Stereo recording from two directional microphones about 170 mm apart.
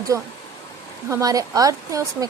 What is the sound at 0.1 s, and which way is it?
Speech, 20° right (ahead or behind).